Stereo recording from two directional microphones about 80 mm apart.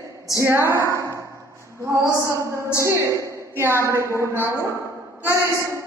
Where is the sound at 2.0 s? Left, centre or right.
Left.